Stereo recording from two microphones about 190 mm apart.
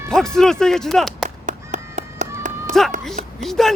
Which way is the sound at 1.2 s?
40° right (ahead or behind).